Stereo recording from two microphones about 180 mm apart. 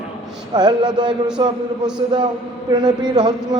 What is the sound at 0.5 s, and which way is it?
A man's voice, 25° right (ahead or behind).